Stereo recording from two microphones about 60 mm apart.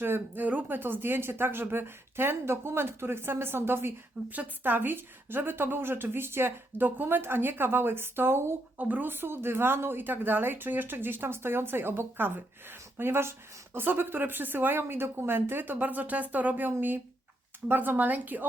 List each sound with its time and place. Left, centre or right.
0.0 s a woman's voice: right
4.3 s a woman's voice: right
8.8 s speech: right
9.0 s a woman's voice: right